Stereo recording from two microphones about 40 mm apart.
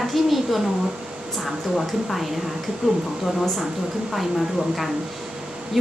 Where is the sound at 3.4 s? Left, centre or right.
Centre.